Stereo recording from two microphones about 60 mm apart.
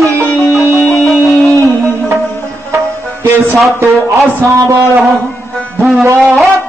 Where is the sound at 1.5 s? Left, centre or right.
Right.